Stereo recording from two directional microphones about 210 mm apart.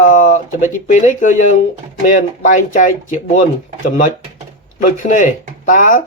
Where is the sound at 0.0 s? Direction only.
40° left (ahead or behind).